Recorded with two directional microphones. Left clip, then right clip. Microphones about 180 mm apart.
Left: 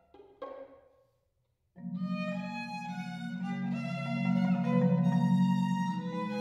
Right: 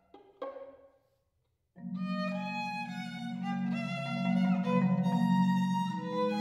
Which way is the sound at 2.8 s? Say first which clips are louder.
Right 1 dB; 50° right (ahead or behind).